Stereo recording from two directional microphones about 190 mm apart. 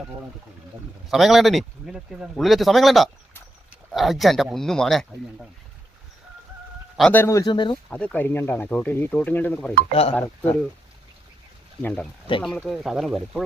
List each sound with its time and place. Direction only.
1.0 s speech: centre (ahead or behind)
6.9 s speech: 5° left (ahead or behind); by 7.8 s 25° left (ahead or behind)
7.9 s speech: 5° left (ahead or behind)
9.9 s speech: 30° left (ahead or behind)
11.8 s speech: 10° left (ahead or behind)
12.3 s speech: 25° left (ahead or behind)
12.6 s speech: centre (ahead or behind)